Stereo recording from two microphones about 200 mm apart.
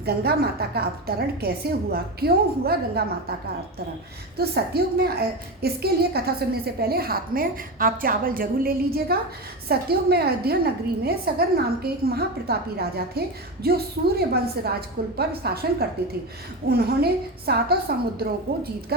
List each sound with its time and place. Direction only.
0.0 s a woman's voice: 50° right (ahead or behind)
4.4 s a woman's voice: 50° right (ahead or behind)